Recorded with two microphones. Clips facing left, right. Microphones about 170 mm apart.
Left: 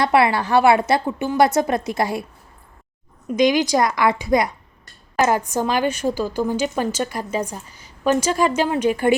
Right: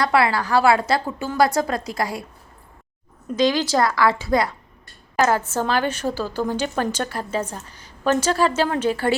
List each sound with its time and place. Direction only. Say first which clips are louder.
0.0 s a woman's voice: left 2 dB; 25° left (ahead or behind)
3.2 s a woman's voice: left 3 dB; 15° left (ahead or behind)